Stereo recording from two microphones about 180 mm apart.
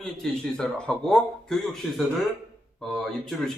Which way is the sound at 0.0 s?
5° left (ahead or behind).